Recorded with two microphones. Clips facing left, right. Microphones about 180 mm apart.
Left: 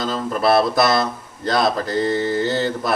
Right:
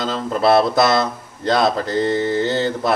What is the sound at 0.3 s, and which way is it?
Speech, 25° right (ahead or behind).